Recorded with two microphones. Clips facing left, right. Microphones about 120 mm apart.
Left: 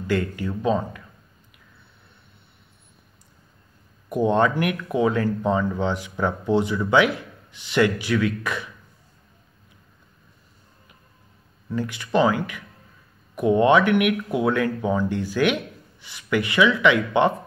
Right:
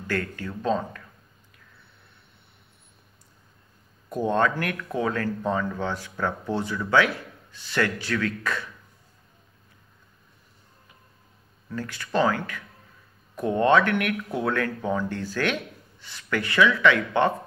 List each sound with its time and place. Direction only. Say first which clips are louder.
0.0 s speech: left 5 dB; 15° left (ahead or behind)
4.1 s speech: left 4 dB; 15° left (ahead or behind)
11.7 s speech: left 4 dB; 15° left (ahead or behind)